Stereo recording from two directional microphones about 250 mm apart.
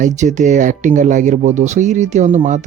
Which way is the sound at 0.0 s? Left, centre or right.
Right.